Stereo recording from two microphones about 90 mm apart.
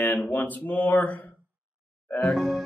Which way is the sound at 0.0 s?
25° left (ahead or behind).